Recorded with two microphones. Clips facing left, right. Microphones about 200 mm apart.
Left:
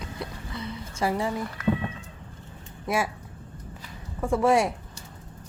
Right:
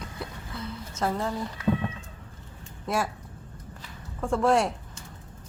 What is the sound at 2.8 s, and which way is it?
Speech, 5° left (ahead or behind).